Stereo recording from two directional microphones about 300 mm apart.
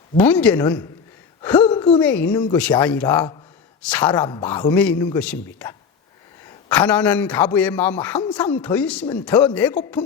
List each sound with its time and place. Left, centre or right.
0.2 s a man's voice: centre
1.4 s gasp: centre
1.6 s a sound: centre
2.0 s a man's voice: centre